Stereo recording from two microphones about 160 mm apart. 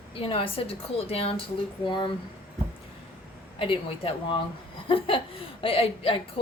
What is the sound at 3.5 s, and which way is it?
Speech, 35° left (ahead or behind).